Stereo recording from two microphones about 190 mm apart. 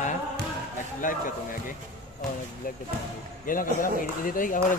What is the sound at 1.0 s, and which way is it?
Speech, 45° left (ahead or behind).